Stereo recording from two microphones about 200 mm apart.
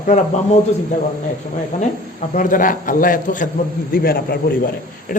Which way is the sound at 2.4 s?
40° left (ahead or behind).